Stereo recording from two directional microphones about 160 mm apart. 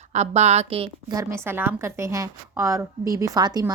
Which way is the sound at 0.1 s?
45° right (ahead or behind).